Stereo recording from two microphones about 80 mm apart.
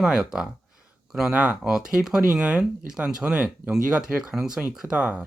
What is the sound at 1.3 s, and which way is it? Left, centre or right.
Speech, centre.